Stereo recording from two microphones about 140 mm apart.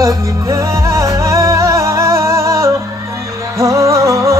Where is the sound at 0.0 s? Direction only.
20° right (ahead or behind).